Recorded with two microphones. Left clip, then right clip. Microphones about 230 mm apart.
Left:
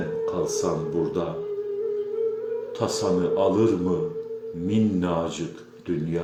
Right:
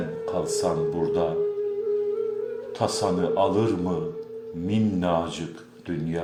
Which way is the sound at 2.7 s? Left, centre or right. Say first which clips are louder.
Even; right.